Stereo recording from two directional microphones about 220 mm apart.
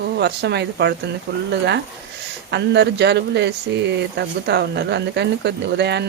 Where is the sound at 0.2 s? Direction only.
50° right (ahead or behind).